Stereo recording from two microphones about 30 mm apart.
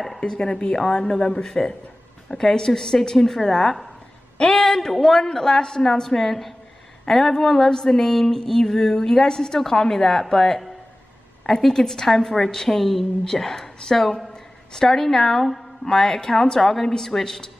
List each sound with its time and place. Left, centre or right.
0.3 s a woman's voice: left
0.7 s a woman's voice: centre
11.7 s speech: centre
12.7 s a woman's voice: centre
13.4 s a woman's voice: centre